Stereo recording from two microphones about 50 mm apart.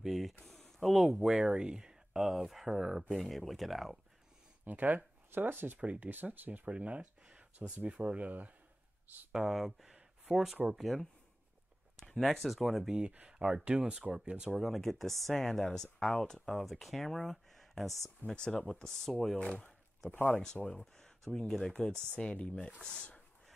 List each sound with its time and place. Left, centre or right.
0.0 s speech: centre
4.6 s speech: right
6.7 s speech: right
9.3 s speech: centre
12.1 s speech: centre
13.3 s speech: centre
14.6 s speech: centre
18.2 s speech: centre
20.1 s speech: left
20.8 s a sound: centre
21.4 s speech: centre
22.3 s speech: left